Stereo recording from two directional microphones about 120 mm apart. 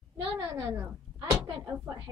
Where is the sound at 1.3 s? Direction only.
30° right (ahead or behind).